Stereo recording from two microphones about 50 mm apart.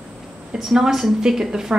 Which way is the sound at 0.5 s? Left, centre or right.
Centre.